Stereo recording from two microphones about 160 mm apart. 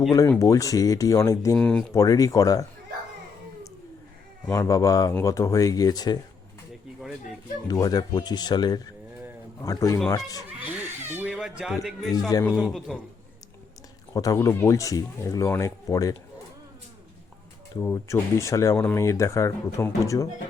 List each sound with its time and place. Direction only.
0.3 s speech: 20° left (ahead or behind)
1.5 s a man's voice: 5° left (ahead or behind)
1.9 s speech: 20° left (ahead or behind)
4.4 s speech: 15° left (ahead or behind)
7.7 s speech: 25° left (ahead or behind)
10.6 s a sound: 10° right (ahead or behind)
11.3 s a man's voice: centre (ahead or behind)
14.1 s speech: 20° left (ahead or behind)
17.7 s speech: 15° left (ahead or behind)